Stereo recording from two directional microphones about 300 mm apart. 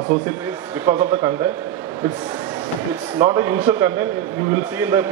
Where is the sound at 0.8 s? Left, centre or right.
Centre.